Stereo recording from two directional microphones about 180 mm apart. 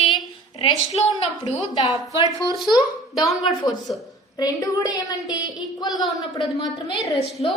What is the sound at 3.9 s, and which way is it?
A woman's voice, 25° left (ahead or behind).